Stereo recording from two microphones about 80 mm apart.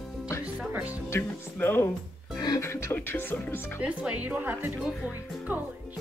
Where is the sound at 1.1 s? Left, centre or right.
Left.